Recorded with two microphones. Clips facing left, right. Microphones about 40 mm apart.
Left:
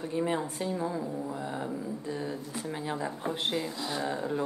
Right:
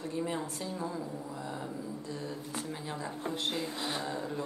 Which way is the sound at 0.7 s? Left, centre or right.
Centre.